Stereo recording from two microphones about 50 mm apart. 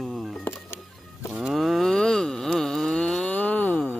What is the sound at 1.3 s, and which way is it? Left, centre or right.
Livestock, centre.